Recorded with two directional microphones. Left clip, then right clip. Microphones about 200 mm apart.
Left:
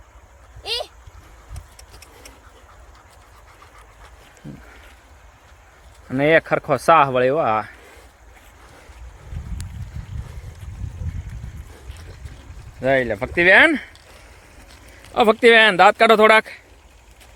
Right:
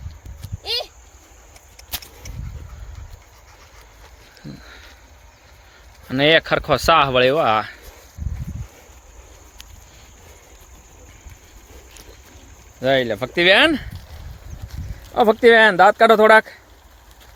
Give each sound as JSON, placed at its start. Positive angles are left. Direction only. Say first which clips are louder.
{"t": 0.6, "sound": "a sound", "louder": "right 1 dB", "side_deg": 0}
{"t": 6.1, "sound": "speech", "louder": "right 1 dB", "side_deg": -5}
{"t": 12.8, "sound": "speech", "louder": "right 1 dB", "side_deg": 0}
{"t": 15.1, "sound": "speech", "louder": "even", "side_deg": 0}